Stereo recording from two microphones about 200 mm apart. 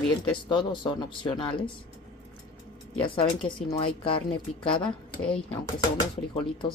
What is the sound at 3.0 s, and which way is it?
Speech, 25° left (ahead or behind).